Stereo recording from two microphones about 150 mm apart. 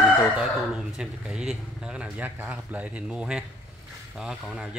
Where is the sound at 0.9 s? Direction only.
5° right (ahead or behind).